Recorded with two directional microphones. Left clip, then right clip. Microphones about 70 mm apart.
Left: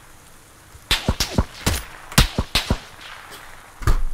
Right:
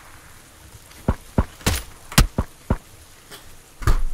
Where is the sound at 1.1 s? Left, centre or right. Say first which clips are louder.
Left 3 dB; centre.